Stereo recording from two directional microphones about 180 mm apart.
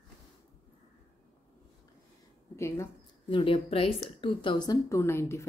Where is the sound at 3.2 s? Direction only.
30° left (ahead or behind).